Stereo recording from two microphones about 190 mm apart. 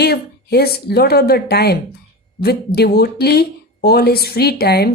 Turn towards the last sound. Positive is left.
turn(degrees=55)  # may be behind; listen again after turning